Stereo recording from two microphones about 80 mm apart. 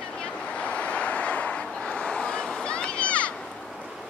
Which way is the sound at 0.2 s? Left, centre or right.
Centre.